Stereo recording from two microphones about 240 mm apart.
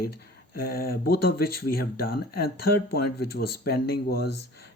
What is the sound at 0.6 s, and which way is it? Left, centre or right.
Speech, left.